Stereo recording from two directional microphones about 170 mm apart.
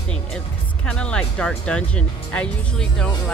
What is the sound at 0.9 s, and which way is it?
Speech, 5° left (ahead or behind).